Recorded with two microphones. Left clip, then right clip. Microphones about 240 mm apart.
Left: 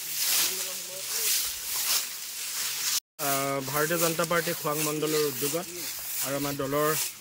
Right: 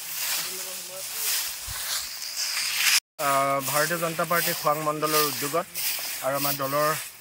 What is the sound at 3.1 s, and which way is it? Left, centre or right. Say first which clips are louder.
Speech: right 6 dB; centre.